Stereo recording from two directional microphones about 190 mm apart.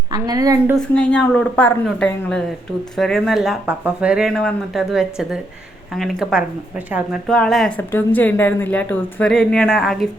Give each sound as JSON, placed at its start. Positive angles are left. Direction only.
{"t": 0.1, "sound": "a woman's voice", "side_deg": -20}
{"t": 0.8, "sound": "speech", "side_deg": 5}